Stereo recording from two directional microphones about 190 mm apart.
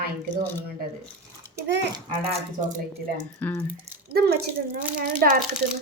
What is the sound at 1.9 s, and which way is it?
Speech, 30° right (ahead or behind).